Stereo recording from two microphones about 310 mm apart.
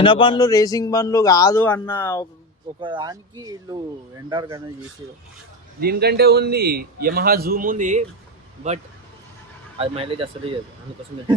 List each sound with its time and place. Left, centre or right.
0.0 s a man's voice: centre
2.8 s speech: centre
5.8 s a man's voice: right
9.7 s speech: centre